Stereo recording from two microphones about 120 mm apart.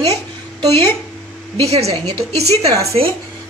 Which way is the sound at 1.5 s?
60° right (ahead or behind).